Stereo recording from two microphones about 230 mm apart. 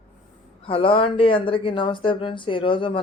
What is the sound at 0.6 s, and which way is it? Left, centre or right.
Speech, left.